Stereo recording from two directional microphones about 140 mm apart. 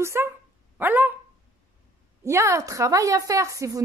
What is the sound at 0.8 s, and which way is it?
Dog, 15° right (ahead or behind).